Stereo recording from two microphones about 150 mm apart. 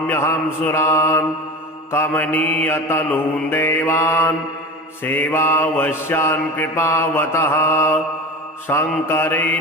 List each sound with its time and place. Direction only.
0.1 s mantra: 15° left (ahead or behind)